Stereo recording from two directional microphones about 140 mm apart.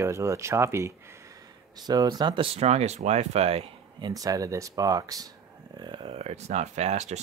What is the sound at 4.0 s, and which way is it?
Speech, 25° right (ahead or behind).